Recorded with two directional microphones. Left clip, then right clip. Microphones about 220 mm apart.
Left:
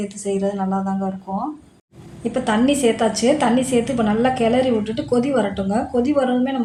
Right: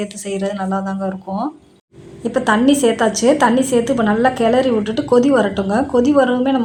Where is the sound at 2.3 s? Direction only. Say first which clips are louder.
Right 4 dB; 15° right (ahead or behind).